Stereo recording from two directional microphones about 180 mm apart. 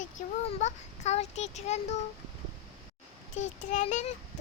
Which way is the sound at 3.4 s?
40° left (ahead or behind).